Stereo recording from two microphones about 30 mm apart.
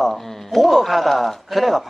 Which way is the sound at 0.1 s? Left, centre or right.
Centre.